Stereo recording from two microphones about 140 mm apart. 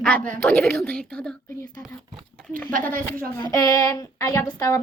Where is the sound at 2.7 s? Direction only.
75° right (ahead or behind).